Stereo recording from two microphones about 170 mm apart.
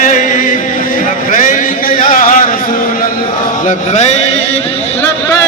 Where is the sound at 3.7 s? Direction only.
45° left (ahead or behind).